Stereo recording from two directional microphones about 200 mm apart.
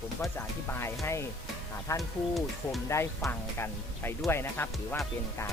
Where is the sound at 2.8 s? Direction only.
15° left (ahead or behind).